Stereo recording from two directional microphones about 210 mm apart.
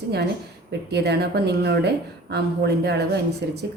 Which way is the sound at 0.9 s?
50° right (ahead or behind).